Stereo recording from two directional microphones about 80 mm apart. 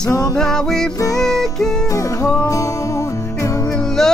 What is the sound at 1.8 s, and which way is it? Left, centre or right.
Music, left.